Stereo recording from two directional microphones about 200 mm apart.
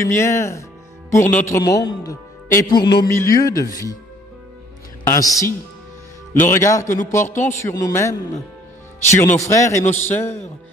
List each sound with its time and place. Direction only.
0.0 s a man's voice: 15° left (ahead or behind)
5.0 s a man's voice: 15° left (ahead or behind)